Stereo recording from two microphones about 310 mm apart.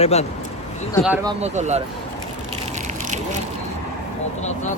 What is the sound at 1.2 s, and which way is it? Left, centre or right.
Speech, right.